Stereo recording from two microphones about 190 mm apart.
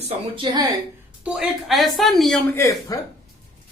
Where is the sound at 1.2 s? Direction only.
5° right (ahead or behind).